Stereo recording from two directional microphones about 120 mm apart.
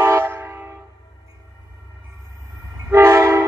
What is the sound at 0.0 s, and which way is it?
Train, 20° right (ahead or behind).